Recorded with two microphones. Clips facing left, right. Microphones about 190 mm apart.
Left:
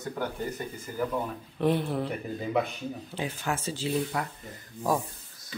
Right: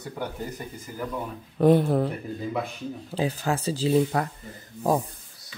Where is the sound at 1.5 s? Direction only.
45° right (ahead or behind).